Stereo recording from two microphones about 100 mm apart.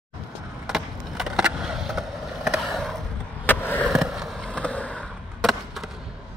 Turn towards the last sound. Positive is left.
turn(degrees=0)  # may be behind; listen again after turning